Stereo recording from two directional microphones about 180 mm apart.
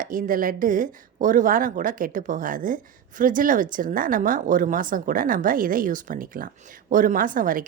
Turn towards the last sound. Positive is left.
turn(degrees=-50)  # may be behind; listen again after turning